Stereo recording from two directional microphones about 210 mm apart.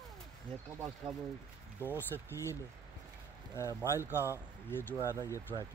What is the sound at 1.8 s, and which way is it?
Speech, 10° left (ahead or behind).